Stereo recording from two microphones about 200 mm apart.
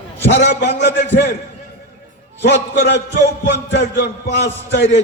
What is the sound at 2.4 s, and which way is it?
A man's voice, 60° left (ahead or behind).